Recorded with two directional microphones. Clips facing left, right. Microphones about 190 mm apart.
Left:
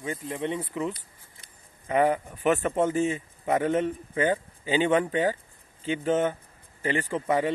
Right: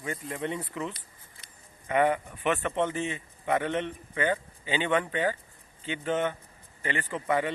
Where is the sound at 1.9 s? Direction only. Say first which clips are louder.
Left 2 dB; 35° left (ahead or behind).